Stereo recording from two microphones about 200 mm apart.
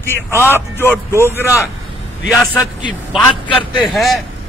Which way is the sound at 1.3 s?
15° left (ahead or behind).